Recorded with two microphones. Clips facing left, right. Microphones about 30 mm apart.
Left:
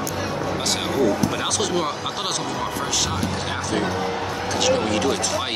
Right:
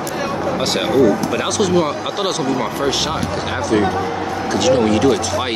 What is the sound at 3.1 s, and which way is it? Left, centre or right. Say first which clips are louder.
Speech: right 4 dB; centre.